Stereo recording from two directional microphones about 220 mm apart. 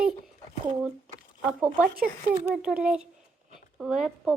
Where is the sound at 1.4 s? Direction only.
5° right (ahead or behind).